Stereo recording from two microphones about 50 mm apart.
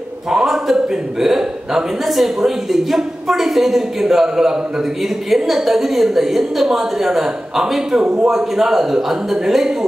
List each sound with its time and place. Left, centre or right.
0.3 s a sound: centre
1.2 s a woman's voice: centre
8.0 s a man's voice: right
8.3 s a woman's voice: centre